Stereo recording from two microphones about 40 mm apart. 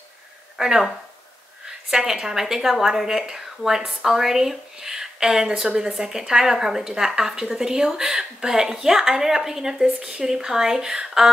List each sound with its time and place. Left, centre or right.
0.6 s a woman's voice: centre